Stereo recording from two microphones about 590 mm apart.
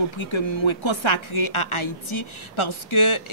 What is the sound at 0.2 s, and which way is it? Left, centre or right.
A woman's voice, left.